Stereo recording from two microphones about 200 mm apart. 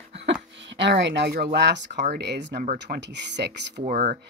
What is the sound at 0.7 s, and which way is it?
Speech, 65° right (ahead or behind).